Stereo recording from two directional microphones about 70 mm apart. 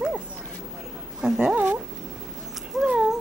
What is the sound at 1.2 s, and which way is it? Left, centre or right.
Speech, centre.